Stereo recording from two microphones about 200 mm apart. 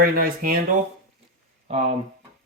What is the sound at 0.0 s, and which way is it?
Speech, 45° right (ahead or behind).